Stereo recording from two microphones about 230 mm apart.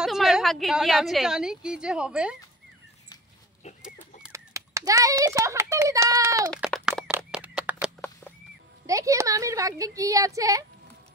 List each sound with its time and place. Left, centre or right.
0.0 s a woman's voice: centre
3.6 s livestock: left
4.2 s a child's voice: centre
6.5 s a sound: centre
8.8 s speech: centre